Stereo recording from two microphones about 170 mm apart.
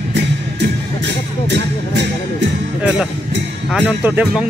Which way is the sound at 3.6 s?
5° left (ahead or behind).